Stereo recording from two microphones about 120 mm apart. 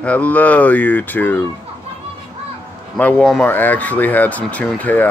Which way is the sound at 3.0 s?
10° left (ahead or behind).